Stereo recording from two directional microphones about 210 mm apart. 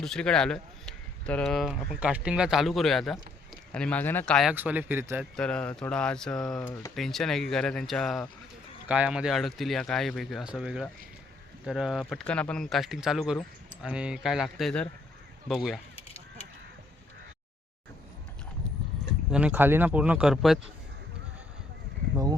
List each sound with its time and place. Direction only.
0.0 s speech: 5° left (ahead or behind)
4.5 s speech: 10° right (ahead or behind)
5.4 s speech: 5° left (ahead or behind)
16.0 s honk: 30° left (ahead or behind)
19.3 s speech: 5° right (ahead or behind)